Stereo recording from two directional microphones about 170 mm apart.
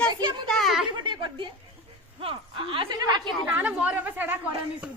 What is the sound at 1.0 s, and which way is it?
Chuckle, 30° right (ahead or behind).